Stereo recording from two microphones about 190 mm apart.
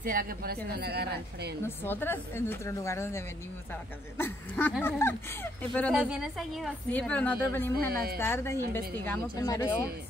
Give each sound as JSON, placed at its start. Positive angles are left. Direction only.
{"t": 0.0, "sound": "a woman's voice", "side_deg": -50}
{"t": 1.6, "sound": "a woman's voice", "side_deg": 10}
{"t": 7.9, "sound": "speech", "side_deg": -55}
{"t": 8.2, "sound": "speech", "side_deg": 15}